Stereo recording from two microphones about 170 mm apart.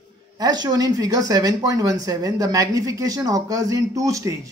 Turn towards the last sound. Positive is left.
turn(degrees=-20)  # may be behind; listen again after turning